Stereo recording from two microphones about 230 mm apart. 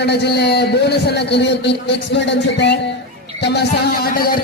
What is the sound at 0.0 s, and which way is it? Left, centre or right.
A man's voice, left.